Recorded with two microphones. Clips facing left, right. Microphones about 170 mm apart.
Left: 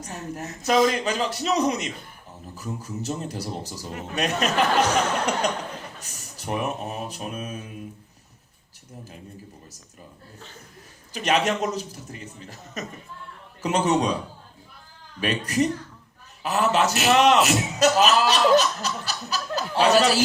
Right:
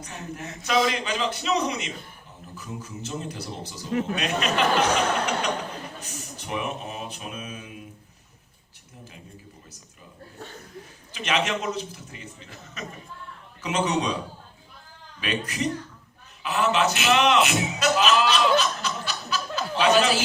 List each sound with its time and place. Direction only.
0.0 s a man's voice: 40° left (ahead or behind)
11.1 s a man's voice: 40° left (ahead or behind)
15.2 s a man's voice: 40° left (ahead or behind)